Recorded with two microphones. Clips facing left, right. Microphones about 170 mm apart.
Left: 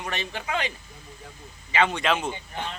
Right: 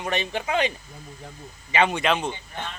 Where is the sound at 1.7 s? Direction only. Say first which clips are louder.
Right 2 dB; 20° right (ahead or behind).